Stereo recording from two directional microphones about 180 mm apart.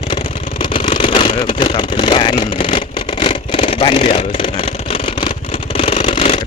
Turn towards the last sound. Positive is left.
turn(degrees=40)  # may be behind; listen again after turning